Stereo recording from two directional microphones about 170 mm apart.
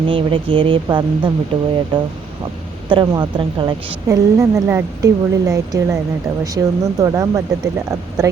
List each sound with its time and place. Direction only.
0.1 s a woman's voice: 30° right (ahead or behind)